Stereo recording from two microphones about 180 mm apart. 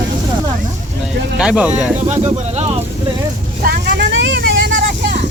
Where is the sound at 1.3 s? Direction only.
5° right (ahead or behind).